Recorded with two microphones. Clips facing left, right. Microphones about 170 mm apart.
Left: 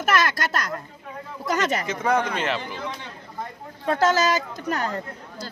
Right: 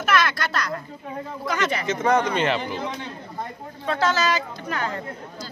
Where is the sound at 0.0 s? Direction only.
45° left (ahead or behind).